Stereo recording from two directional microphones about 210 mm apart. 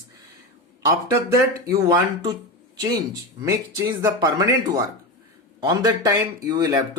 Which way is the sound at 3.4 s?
15° right (ahead or behind).